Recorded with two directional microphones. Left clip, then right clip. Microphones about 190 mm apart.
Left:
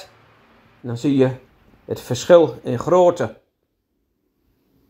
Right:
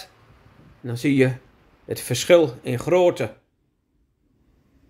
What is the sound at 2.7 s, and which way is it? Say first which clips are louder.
Speech: left 2 dB; 20° right (ahead or behind).